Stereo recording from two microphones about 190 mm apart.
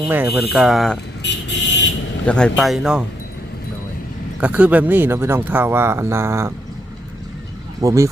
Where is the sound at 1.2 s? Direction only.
65° left (ahead or behind).